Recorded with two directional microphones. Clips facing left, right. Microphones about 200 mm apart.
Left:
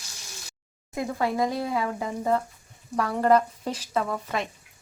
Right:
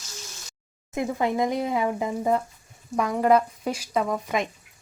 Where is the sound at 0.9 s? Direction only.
20° right (ahead or behind).